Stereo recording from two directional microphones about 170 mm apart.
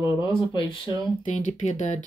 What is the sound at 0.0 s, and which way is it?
Speech, 25° left (ahead or behind).